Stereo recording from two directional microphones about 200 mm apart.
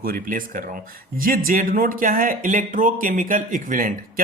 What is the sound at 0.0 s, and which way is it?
Speech, 45° right (ahead or behind).